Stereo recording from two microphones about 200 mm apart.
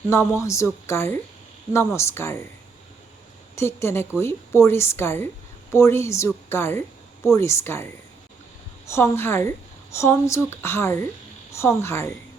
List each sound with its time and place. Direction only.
0.1 s a woman's voice: 15° left (ahead or behind)
3.5 s a woman's voice: 15° left (ahead or behind)
8.9 s a woman's voice: 10° left (ahead or behind)